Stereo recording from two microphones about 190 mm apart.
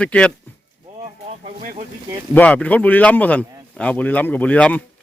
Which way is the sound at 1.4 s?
40° right (ahead or behind).